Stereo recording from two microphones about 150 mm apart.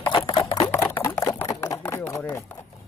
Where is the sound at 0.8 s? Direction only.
15° left (ahead or behind).